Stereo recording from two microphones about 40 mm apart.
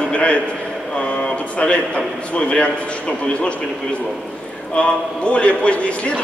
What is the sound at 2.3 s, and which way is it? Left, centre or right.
Speech, left.